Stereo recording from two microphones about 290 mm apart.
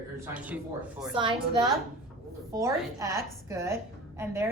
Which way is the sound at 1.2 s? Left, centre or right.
Centre.